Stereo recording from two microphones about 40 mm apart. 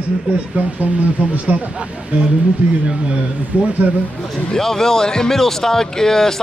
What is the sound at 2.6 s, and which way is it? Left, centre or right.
Speech, right.